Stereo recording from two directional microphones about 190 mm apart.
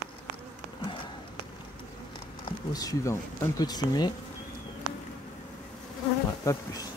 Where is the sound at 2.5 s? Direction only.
20° left (ahead or behind).